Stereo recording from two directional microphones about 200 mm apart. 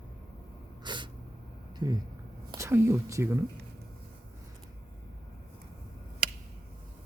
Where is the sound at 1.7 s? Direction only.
20° right (ahead or behind).